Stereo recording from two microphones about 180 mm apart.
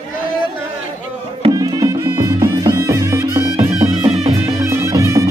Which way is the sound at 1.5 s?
20° right (ahead or behind).